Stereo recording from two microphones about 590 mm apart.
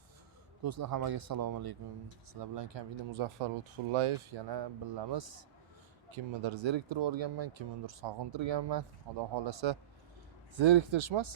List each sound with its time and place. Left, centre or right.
0.6 s speech: right